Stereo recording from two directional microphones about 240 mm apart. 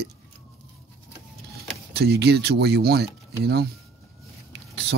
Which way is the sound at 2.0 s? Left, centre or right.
Right.